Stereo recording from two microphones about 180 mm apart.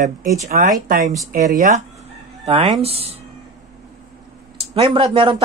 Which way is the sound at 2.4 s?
35° right (ahead or behind).